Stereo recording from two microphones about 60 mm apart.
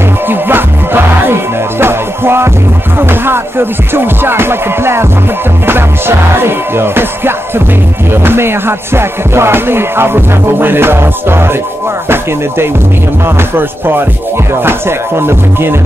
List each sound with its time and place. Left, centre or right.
0.3 s music: right